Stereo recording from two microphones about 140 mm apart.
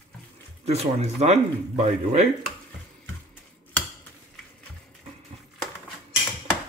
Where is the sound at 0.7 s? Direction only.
50° right (ahead or behind).